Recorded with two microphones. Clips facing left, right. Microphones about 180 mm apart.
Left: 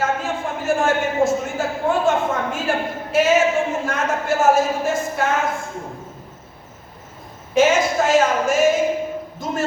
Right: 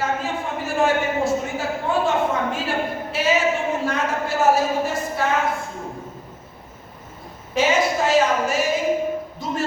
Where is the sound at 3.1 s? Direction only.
45° left (ahead or behind).